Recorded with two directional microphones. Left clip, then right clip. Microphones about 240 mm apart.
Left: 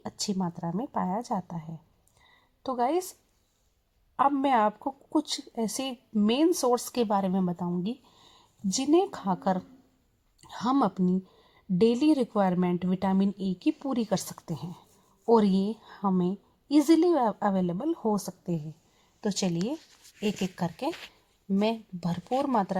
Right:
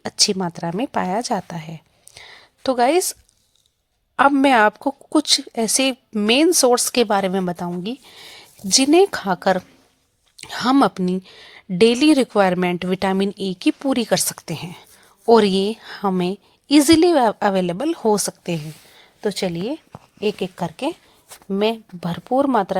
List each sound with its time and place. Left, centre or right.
0.0 s a woman's voice: right
4.2 s a woman's voice: right
19.2 s speech: right